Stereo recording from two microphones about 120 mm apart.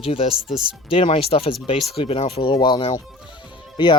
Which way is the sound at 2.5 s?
35° left (ahead or behind).